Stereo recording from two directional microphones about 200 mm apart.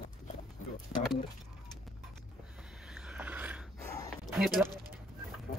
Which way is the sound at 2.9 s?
5° right (ahead or behind).